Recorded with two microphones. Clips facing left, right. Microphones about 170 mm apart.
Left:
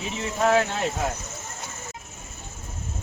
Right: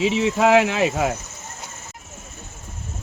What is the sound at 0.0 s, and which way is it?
Speech, 90° right.